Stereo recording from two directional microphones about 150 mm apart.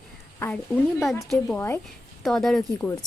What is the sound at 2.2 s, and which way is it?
Speech, centre (ahead or behind).